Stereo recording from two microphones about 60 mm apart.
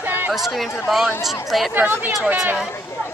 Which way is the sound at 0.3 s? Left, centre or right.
Centre.